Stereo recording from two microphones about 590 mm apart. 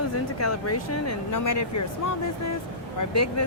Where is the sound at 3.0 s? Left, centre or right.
Left.